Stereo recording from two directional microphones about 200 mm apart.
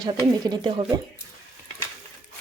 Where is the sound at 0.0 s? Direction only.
20° right (ahead or behind).